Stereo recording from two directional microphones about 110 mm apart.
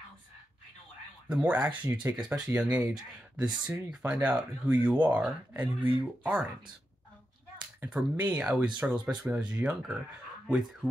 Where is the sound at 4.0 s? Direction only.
15° right (ahead or behind).